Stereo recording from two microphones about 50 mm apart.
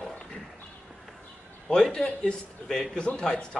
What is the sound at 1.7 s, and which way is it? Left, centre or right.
A man's voice, centre.